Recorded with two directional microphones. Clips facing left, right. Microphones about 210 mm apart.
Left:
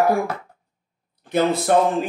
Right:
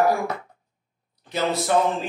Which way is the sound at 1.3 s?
55° left (ahead or behind).